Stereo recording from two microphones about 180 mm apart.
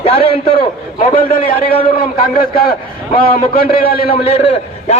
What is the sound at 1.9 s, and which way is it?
Speech, 55° left (ahead or behind).